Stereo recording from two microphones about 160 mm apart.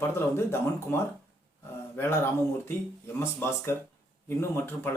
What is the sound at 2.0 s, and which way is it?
Speech, 15° left (ahead or behind).